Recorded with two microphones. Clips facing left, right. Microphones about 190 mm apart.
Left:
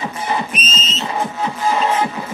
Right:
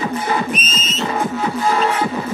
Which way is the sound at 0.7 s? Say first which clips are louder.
Right 1 dB; 50° right (ahead or behind).